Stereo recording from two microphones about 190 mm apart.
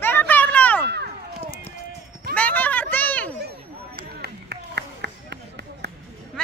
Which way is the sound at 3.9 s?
55° right (ahead or behind).